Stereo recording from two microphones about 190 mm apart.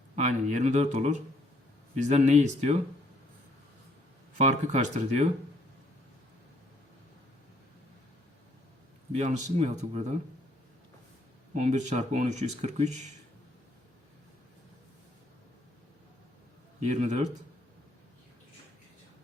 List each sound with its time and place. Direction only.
0.2 s speech: 35° right (ahead or behind)
4.4 s speech: 40° right (ahead or behind)
9.1 s speech: 35° right (ahead or behind)
11.5 s speech: 40° right (ahead or behind)
16.8 s speech: 35° right (ahead or behind)